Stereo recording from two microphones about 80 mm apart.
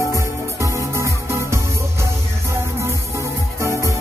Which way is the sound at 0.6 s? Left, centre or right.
Right.